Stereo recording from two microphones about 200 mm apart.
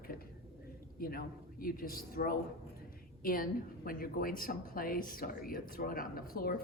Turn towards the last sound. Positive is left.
turn(degrees=45)  # may be behind; listen again after turning